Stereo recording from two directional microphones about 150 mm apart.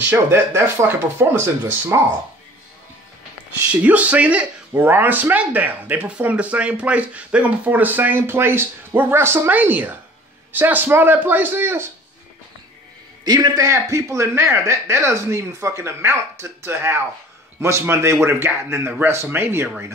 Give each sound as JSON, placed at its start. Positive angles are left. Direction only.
{"t": 0.0, "sound": "speech", "side_deg": -15}
{"t": 3.8, "sound": "speech", "side_deg": -10}
{"t": 13.2, "sound": "a man's voice", "side_deg": -25}